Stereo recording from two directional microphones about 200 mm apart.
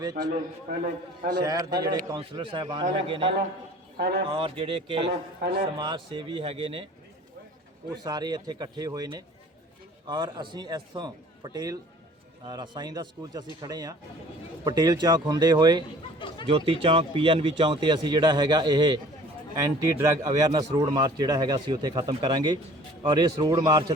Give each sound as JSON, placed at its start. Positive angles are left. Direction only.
{"t": 0.0, "sound": "a man's voice", "side_deg": -20}
{"t": 1.3, "sound": "a man's voice", "side_deg": -20}
{"t": 3.9, "sound": "speech", "side_deg": -55}
{"t": 4.3, "sound": "a man's voice", "side_deg": -30}
{"t": 5.4, "sound": "a man's voice", "side_deg": -55}
{"t": 5.7, "sound": "a man's voice", "side_deg": -20}
{"t": 8.0, "sound": "a man's voice", "side_deg": -20}
{"t": 16.1, "sound": "chatter", "side_deg": 25}
{"t": 16.5, "sound": "a man's voice", "side_deg": -25}
{"t": 20.0, "sound": "a man's voice", "side_deg": -20}